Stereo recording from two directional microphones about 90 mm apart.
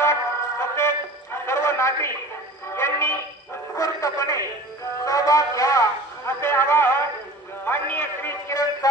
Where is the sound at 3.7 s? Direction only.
40° left (ahead or behind).